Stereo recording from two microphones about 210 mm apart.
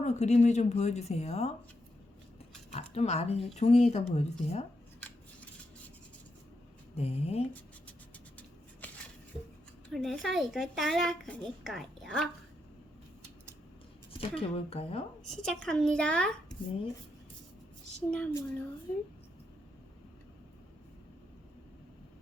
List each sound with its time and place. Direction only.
0.0 s speech: 30° left (ahead or behind)
2.7 s speech: 30° left (ahead or behind)
6.9 s speech: 30° left (ahead or behind)
8.4 s a sound: 5° left (ahead or behind)
9.9 s speech: centre (ahead or behind)
14.2 s speech: 25° left (ahead or behind)
15.2 s a woman's voice: 90° left
15.4 s speech: 5° left (ahead or behind)
18.1 s speech: 5° left (ahead or behind)